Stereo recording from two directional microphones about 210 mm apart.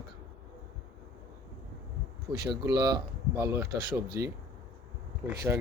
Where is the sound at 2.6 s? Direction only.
15° right (ahead or behind).